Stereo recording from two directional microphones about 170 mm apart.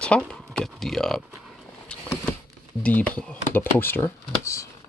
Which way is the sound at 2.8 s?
10° left (ahead or behind).